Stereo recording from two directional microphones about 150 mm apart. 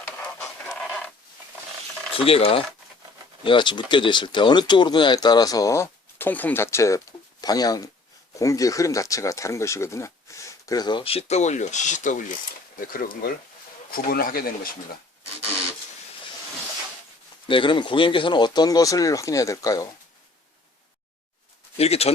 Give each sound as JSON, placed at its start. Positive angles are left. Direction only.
{"t": 0.2, "sound": "pant", "side_deg": 10}
{"t": 2.1, "sound": "speech", "side_deg": 40}
{"t": 12.9, "sound": "speech", "side_deg": 70}
{"t": 17.5, "sound": "speech", "side_deg": 35}
{"t": 21.8, "sound": "speech", "side_deg": 45}